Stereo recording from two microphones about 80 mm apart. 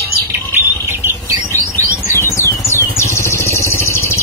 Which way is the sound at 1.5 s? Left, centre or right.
Left.